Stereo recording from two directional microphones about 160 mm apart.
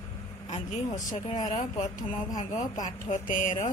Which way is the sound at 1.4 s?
50° left (ahead or behind).